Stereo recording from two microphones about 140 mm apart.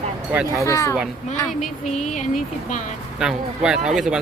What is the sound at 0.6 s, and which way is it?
Speech, 20° left (ahead or behind).